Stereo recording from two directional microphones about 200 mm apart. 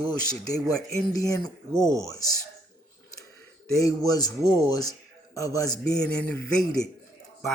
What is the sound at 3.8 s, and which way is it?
A man's voice, 20° left (ahead or behind).